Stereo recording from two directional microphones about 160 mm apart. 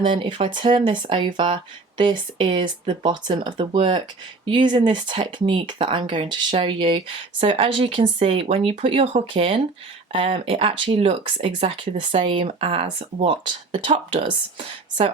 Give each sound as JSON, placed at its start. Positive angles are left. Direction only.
{"t": 0.1, "sound": "speech", "side_deg": -30}